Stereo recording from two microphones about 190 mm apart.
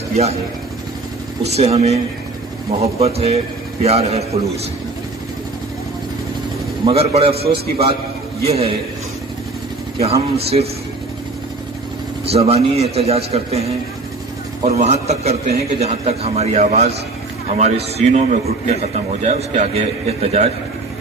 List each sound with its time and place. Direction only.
0.1 s speech: 35° right (ahead or behind)
1.5 s a man's voice: 35° right (ahead or behind)
6.8 s a man's voice: 30° right (ahead or behind)
7.4 s a man's voice: 55° right (ahead or behind)
7.7 s a man's voice: 30° right (ahead or behind)
9.9 s a man's voice: 30° right (ahead or behind)
12.3 s a man's voice: 30° right (ahead or behind)